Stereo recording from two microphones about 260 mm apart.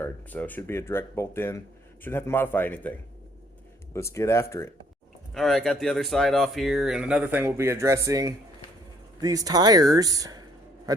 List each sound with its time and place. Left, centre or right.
0.0 s speech: centre
3.9 s speech: centre